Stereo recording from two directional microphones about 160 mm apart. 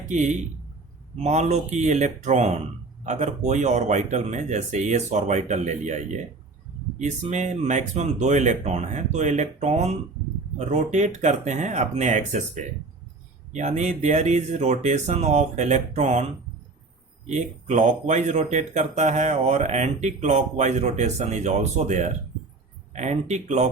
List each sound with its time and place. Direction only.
0.1 s speech: 50° right (ahead or behind)
17.2 s speech: 50° right (ahead or behind)